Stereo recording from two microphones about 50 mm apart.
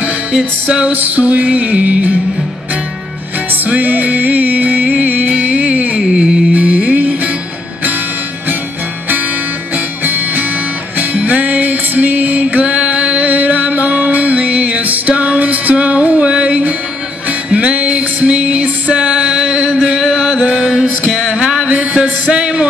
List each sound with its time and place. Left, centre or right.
0.3 s music: centre
3.6 s music: right
10.0 s music: right
11.0 s music: right
20.4 s mantra: centre
21.4 s music: centre
22.3 s a sound: centre